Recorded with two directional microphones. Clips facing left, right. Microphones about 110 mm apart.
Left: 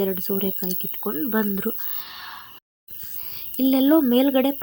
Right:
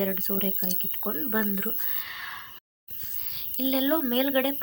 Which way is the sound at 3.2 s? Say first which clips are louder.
Left 9 dB; 35° left (ahead or behind).